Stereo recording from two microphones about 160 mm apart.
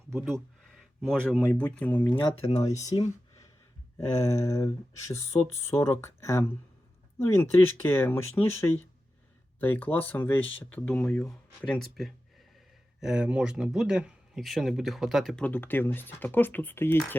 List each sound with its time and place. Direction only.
0.1 s speech: centre (ahead or behind)
2.9 s speech: 30° left (ahead or behind)
4.1 s speech: 20° left (ahead or behind)